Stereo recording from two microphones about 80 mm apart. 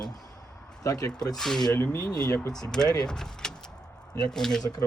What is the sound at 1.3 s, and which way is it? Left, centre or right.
Speech, centre.